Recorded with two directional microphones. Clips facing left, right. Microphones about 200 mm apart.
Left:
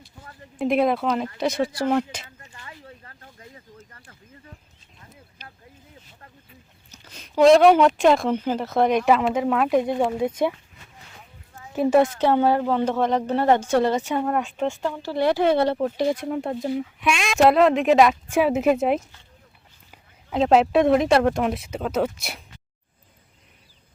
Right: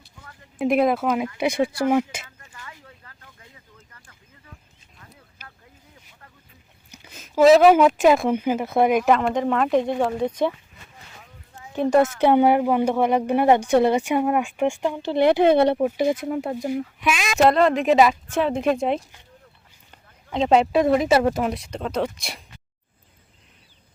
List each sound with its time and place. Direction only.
0.6 s speech: centre (ahead or behind)
2.4 s a sound: 25° left (ahead or behind)
6.9 s speech: 10° right (ahead or behind)
11.7 s a woman's voice: 5° left (ahead or behind)
12.2 s speech: 15° right (ahead or behind)
16.2 s speech: 5° right (ahead or behind)